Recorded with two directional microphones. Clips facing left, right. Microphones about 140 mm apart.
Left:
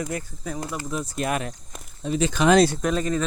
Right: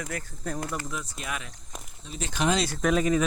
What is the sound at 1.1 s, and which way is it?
Speech, 50° left (ahead or behind).